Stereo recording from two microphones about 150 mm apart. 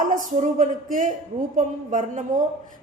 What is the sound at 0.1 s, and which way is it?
A woman's voice, 60° right (ahead or behind).